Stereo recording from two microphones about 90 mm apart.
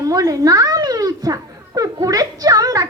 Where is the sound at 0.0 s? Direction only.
40° right (ahead or behind).